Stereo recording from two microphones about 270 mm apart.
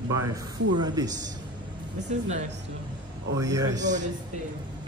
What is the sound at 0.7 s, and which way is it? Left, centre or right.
Speech, centre.